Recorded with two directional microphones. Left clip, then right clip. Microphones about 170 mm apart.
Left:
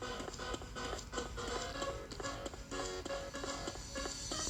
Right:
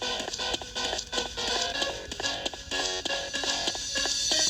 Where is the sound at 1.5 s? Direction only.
30° right (ahead or behind).